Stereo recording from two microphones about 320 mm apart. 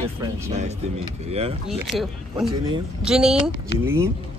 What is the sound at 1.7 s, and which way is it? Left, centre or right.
Speech, centre.